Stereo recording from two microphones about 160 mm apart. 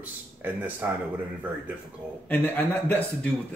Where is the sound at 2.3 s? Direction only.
10° left (ahead or behind).